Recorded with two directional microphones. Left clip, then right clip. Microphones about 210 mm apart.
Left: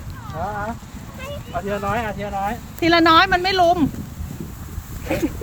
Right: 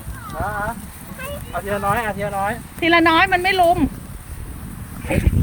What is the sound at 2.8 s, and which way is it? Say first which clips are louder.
Speech: left 1 dB; 20° left (ahead or behind).